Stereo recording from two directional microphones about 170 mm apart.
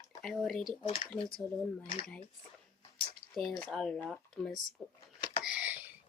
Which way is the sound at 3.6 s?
5° left (ahead or behind).